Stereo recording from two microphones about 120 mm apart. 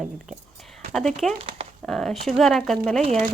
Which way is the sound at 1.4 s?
50° right (ahead or behind).